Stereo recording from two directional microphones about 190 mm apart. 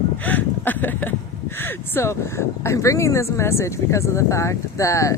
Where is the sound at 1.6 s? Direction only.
10° left (ahead or behind).